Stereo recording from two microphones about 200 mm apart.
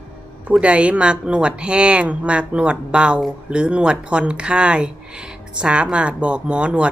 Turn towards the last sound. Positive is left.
turn(degrees=-5)  # may be behind; listen again after turning